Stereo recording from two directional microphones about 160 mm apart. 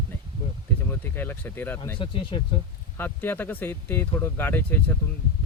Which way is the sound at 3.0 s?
10° left (ahead or behind).